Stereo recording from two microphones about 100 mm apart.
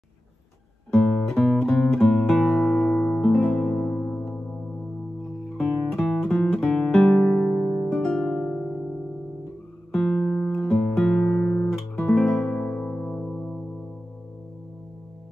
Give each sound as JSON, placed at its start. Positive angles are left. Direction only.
{"t": 0.9, "sound": "music", "side_deg": 10}
{"t": 5.9, "sound": "music", "side_deg": 0}
{"t": 6.3, "sound": "guitar", "side_deg": 15}
{"t": 7.0, "sound": "music", "side_deg": 0}
{"t": 9.9, "sound": "music", "side_deg": 10}